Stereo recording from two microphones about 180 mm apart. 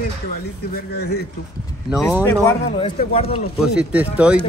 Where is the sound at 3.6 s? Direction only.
5° right (ahead or behind).